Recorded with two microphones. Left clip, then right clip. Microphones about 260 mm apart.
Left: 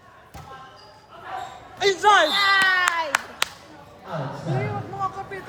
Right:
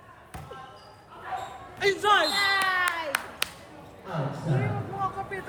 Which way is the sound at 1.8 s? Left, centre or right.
Left.